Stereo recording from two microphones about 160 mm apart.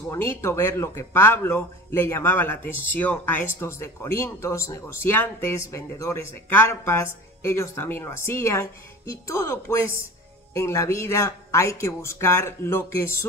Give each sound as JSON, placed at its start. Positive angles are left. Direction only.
{"t": 0.1, "sound": "a man's voice", "side_deg": 15}